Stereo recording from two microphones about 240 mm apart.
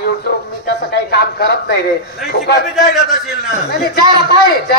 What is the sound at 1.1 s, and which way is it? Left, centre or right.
Speech, left.